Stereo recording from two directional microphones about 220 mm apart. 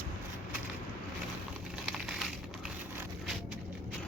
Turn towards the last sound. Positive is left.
turn(degrees=0)  # may be behind; listen again after turning